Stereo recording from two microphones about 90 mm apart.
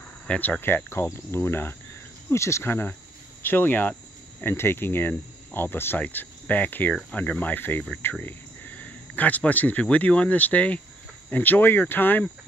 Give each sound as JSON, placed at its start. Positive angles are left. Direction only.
{"t": 0.3, "sound": "cricket", "side_deg": 20}
{"t": 8.0, "sound": "speech", "side_deg": 20}
{"t": 11.2, "sound": "cricket", "side_deg": 20}